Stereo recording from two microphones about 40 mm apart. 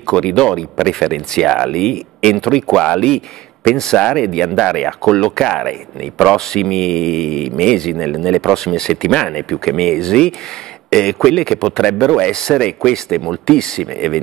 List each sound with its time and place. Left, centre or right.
0.0 s a man's voice: centre
4.5 s speech: centre
4.7 s a man's voice: centre
8.1 s a man's voice: centre